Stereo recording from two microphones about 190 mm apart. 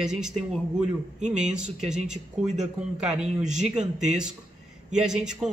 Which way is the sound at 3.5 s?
40° right (ahead or behind).